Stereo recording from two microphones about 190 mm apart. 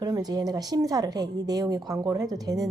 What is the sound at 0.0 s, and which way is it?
Speech, 20° right (ahead or behind).